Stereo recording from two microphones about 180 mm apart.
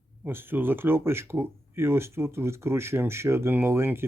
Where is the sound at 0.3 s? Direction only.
10° right (ahead or behind).